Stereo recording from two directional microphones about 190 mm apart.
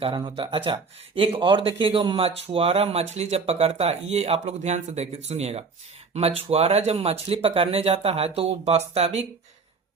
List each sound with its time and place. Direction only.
0.0 s speech: 25° right (ahead or behind)